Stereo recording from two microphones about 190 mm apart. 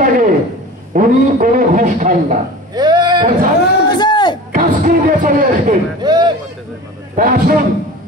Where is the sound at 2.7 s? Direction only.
20° right (ahead or behind).